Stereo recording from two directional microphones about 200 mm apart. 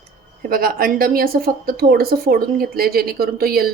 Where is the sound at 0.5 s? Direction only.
45° right (ahead or behind).